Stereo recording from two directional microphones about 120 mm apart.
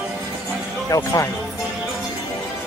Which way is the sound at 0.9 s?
25° left (ahead or behind).